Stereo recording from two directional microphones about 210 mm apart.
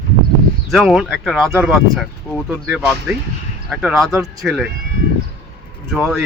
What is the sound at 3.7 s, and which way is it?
Speech, 5° right (ahead or behind).